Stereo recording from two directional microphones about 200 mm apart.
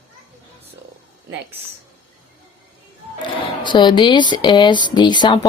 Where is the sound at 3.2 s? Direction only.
20° left (ahead or behind).